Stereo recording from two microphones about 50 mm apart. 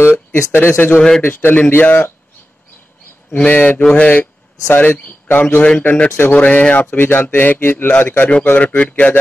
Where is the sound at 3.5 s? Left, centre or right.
Left.